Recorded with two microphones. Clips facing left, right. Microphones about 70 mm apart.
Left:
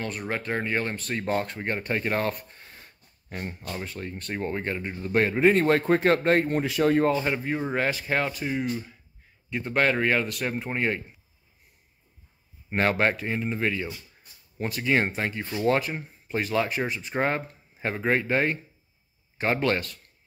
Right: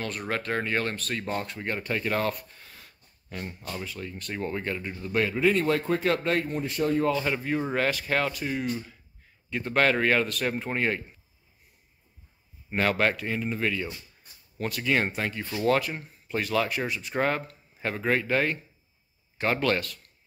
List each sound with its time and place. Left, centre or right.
0.0 s speech: centre
1.2 s speech: left
6.6 s speech: left
7.2 s speech: centre
12.6 s speech: left